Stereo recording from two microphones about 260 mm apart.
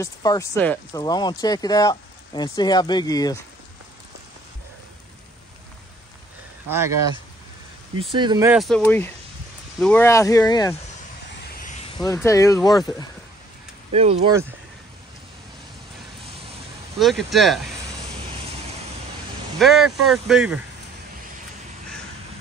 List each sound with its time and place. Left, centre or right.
0.0 s speech: centre
8.0 s speech: centre
8.5 s speech: centre
11.3 s a sound: left
12.0 s speech: centre
13.9 s speech: right
17.0 s speech: centre
19.6 s speech: centre